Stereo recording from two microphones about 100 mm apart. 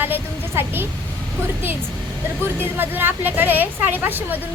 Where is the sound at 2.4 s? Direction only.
20° right (ahead or behind).